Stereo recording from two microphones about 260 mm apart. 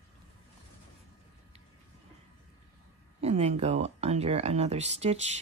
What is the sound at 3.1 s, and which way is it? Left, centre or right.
Speech, right.